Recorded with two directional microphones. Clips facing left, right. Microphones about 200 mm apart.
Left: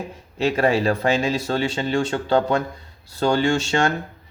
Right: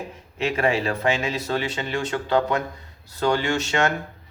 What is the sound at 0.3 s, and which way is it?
Speech, 35° left (ahead or behind).